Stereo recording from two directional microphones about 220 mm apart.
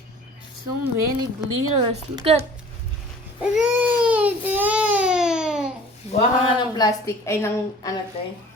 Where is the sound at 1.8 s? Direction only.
25° right (ahead or behind).